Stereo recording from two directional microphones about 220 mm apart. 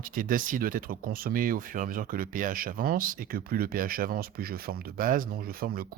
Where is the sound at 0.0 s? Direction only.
40° right (ahead or behind).